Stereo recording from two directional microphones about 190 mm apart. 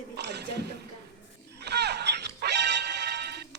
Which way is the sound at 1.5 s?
60° right (ahead or behind).